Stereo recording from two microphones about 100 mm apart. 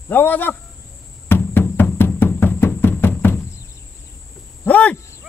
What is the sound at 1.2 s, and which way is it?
Music, 20° left (ahead or behind).